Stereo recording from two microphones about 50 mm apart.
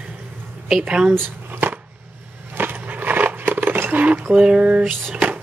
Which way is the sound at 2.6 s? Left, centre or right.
Right.